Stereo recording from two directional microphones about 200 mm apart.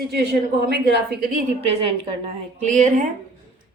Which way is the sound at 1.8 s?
30° right (ahead or behind).